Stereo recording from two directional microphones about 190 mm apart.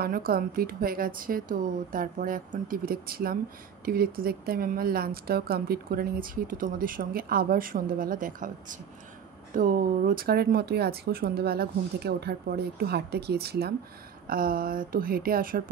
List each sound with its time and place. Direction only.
0.0 s a woman's voice: 50° right (ahead or behind)